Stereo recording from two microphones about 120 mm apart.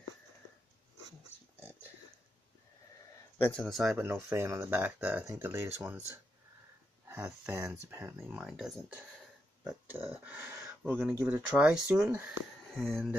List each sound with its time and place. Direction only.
3.3 s a man's voice: 15° left (ahead or behind)
3.6 s speech: centre (ahead or behind)
3.9 s speech: 20° right (ahead or behind)
7.2 s speech: 10° right (ahead or behind)
8.4 s speech: 5° right (ahead or behind)
9.8 s speech: 15° right (ahead or behind)
12.7 s speech: 5° left (ahead or behind)